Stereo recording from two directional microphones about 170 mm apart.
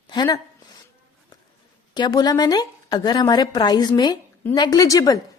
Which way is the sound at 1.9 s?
25° left (ahead or behind).